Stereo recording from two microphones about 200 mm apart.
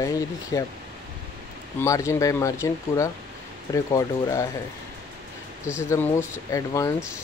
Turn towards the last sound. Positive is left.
turn(degrees=15)  # may be behind; listen again after turning